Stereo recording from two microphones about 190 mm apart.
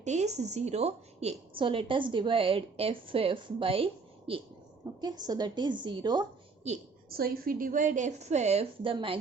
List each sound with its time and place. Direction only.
0.0 s a woman's voice: 35° right (ahead or behind)
4.9 s a woman's voice: 20° right (ahead or behind)
7.1 s a woman's voice: 50° right (ahead or behind); by 9.1 s 25° right (ahead or behind)